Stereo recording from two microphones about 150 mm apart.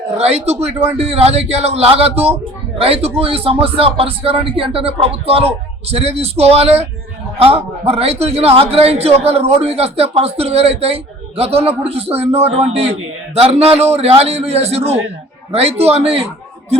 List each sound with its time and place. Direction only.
0.2 s a man's voice: 45° right (ahead or behind)